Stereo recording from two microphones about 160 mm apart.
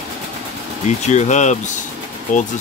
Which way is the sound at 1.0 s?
45° left (ahead or behind).